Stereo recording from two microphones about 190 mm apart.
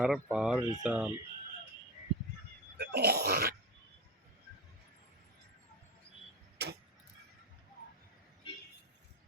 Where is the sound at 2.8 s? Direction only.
60° right (ahead or behind).